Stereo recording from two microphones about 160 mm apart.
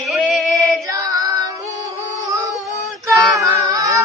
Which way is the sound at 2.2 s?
20° right (ahead or behind).